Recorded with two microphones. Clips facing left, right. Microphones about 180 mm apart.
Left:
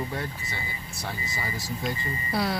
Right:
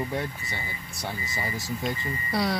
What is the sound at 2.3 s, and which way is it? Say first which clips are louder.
Speech: right 1 dB; centre (ahead or behind).